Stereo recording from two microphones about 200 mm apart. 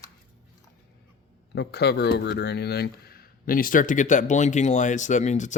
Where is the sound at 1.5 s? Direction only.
55° left (ahead or behind).